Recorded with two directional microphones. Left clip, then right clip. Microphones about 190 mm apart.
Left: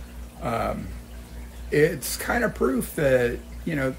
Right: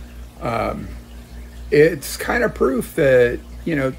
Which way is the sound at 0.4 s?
30° right (ahead or behind).